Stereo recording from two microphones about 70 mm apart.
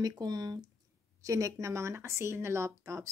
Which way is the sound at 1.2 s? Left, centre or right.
Right.